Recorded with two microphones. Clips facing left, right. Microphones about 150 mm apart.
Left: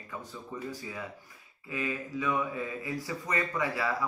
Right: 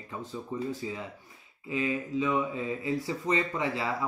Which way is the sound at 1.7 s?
25° right (ahead or behind).